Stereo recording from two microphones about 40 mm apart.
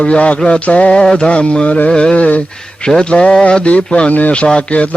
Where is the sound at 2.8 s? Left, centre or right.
Left.